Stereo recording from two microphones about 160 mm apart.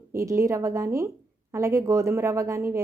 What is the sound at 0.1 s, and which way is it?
A woman's voice, 20° right (ahead or behind).